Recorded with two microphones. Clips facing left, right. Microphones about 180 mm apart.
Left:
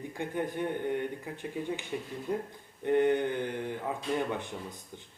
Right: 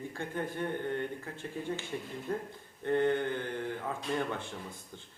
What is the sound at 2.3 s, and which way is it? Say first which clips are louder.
Speech: left 3 dB; 15° left (ahead or behind).